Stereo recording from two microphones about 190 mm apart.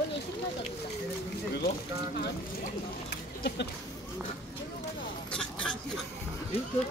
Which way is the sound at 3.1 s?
60° left (ahead or behind).